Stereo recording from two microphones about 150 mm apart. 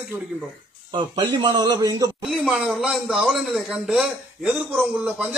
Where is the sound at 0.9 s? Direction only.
30° right (ahead or behind).